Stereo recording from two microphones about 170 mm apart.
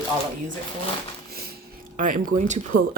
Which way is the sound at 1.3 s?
65° right (ahead or behind).